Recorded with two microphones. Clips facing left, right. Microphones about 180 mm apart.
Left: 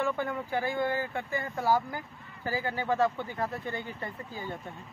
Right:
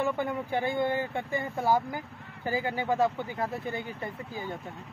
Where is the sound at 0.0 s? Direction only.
15° right (ahead or behind).